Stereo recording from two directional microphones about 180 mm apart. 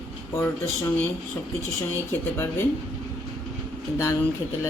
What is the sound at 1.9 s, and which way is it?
Speech, 10° left (ahead or behind).